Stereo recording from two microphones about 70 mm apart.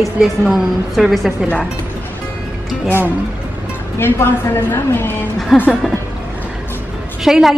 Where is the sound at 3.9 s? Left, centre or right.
Left.